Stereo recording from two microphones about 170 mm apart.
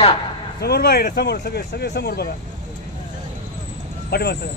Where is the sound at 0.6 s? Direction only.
70° left (ahead or behind).